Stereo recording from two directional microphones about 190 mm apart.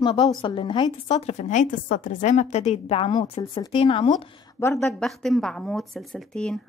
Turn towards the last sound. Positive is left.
turn(degrees=5)  # may be behind; listen again after turning